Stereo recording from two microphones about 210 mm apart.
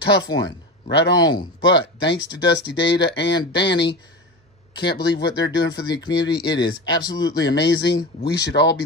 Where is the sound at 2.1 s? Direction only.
55° left (ahead or behind).